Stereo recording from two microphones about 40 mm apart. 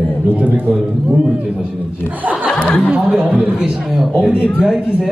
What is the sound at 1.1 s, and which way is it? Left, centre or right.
Speech, right.